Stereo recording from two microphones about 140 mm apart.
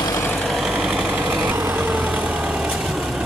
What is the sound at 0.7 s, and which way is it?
Vehicle, 5° right (ahead or behind).